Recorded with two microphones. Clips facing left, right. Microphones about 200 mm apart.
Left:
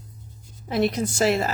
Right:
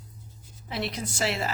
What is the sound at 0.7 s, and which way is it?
Speech, 45° left (ahead or behind).